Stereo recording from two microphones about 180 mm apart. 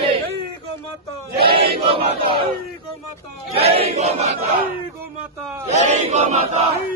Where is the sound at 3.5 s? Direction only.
35° right (ahead or behind).